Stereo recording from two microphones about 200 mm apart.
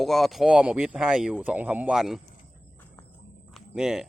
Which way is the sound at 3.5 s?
Centre (ahead or behind).